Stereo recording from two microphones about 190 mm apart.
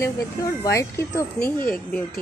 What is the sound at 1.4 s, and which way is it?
Speech, 45° left (ahead or behind).